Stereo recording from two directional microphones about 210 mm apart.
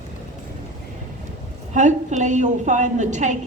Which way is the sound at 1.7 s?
35° right (ahead or behind).